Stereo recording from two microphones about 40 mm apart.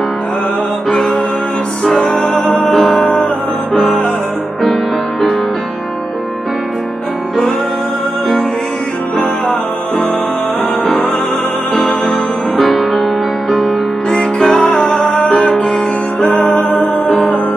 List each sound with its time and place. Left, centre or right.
0.8 s music: centre
12.6 s music: centre